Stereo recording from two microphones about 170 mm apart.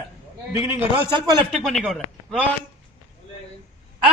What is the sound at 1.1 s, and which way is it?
Speech, 25° right (ahead or behind).